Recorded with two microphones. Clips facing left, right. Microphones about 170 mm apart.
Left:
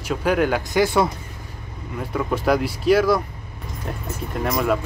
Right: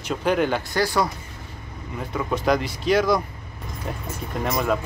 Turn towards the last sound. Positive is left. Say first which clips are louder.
# left 2 dB
turn(degrees=0)  # may be behind; listen again after turning